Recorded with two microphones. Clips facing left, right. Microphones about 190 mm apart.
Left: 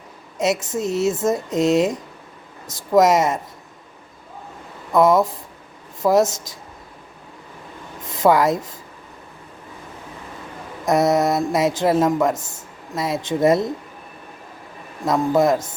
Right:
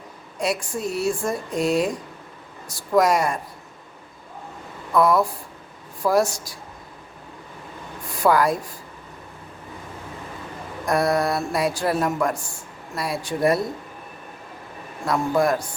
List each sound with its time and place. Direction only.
0.3 s speech: 20° left (ahead or behind)
4.9 s speech: 20° left (ahead or behind)
8.0 s speech: 20° left (ahead or behind)
10.8 s speech: 20° left (ahead or behind)
15.0 s speech: 20° left (ahead or behind)